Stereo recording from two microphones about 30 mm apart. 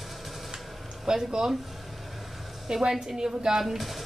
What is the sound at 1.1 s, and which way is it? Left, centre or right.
Speech, right.